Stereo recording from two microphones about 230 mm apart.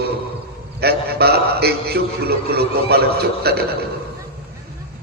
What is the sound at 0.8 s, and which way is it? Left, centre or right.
A man's voice, right.